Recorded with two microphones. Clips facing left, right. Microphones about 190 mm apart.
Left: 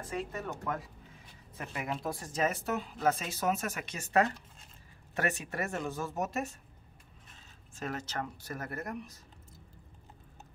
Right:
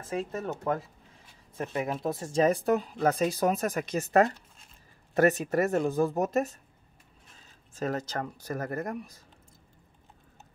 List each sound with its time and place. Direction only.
0.1 s speech: 25° right (ahead or behind)
7.8 s speech: 40° right (ahead or behind)